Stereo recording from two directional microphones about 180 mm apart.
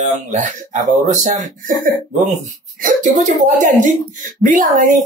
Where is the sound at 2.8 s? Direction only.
45° right (ahead or behind).